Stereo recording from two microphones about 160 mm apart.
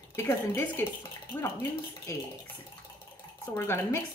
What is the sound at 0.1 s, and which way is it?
Speech, 15° left (ahead or behind).